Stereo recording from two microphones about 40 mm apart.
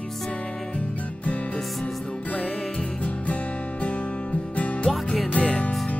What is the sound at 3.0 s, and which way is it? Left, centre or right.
Music, left.